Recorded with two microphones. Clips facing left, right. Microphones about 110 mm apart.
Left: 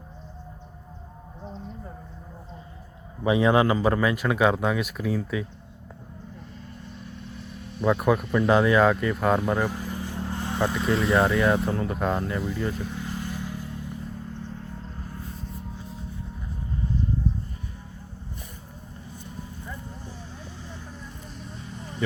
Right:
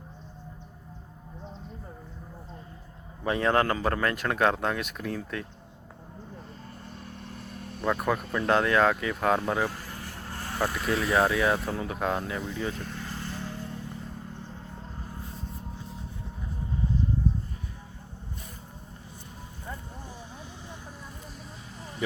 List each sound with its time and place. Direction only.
3.2 s speech: 10° left (ahead or behind)
7.8 s speech: 5° left (ahead or behind)
9.6 s vehicle: 15° left (ahead or behind)
10.6 s speech: centre (ahead or behind)
21.4 s vehicle: centre (ahead or behind)